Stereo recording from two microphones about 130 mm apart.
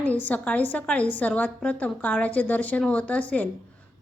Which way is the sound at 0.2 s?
10° left (ahead or behind).